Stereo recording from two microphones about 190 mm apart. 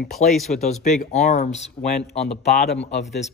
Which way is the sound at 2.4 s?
60° left (ahead or behind).